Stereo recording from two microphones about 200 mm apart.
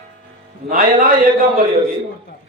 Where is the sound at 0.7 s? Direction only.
45° right (ahead or behind).